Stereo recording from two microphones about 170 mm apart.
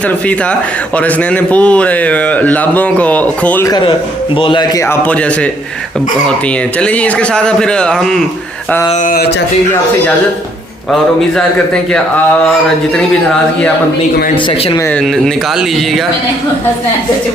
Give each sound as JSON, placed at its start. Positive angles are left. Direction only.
{"t": 0.9, "sound": "speech", "side_deg": 5}
{"t": 3.7, "sound": "a man's voice", "side_deg": 25}
{"t": 4.9, "sound": "speech", "side_deg": 10}
{"t": 6.7, "sound": "a man's voice", "side_deg": 5}
{"t": 11.3, "sound": "a man's voice", "side_deg": 5}
{"t": 14.8, "sound": "a man's voice", "side_deg": 5}